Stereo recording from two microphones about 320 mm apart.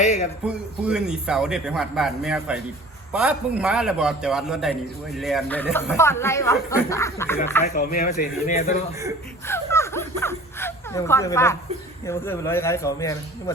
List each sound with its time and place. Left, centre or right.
0.0 s a man's voice: left
0.4 s a man's voice: centre
7.6 s speech: left
9.5 s a sound: centre
12.0 s speech: centre